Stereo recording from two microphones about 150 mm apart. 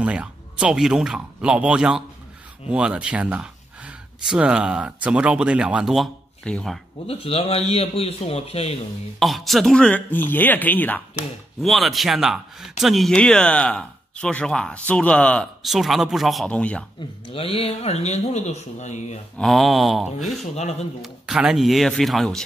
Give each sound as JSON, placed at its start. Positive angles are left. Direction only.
{"t": 0.0, "sound": "speech", "side_deg": -5}
{"t": 7.1, "sound": "a man's voice", "side_deg": 40}
{"t": 9.2, "sound": "speech", "side_deg": 0}
{"t": 11.6, "sound": "speech", "side_deg": 0}
{"t": 17.3, "sound": "speech", "side_deg": 40}
{"t": 19.3, "sound": "speech", "side_deg": 0}
{"t": 20.5, "sound": "speech", "side_deg": 50}
{"t": 21.0, "sound": "speech", "side_deg": -5}